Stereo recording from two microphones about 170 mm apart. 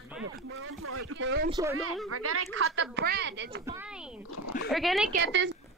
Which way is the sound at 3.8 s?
5° right (ahead or behind).